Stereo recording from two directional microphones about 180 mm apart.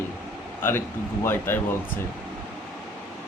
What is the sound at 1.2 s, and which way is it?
Speech, 10° left (ahead or behind).